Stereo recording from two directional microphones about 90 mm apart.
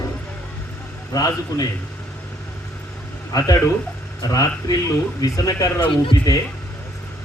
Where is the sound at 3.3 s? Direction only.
45° left (ahead or behind).